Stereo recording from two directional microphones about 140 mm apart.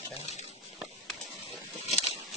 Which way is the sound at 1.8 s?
50° left (ahead or behind).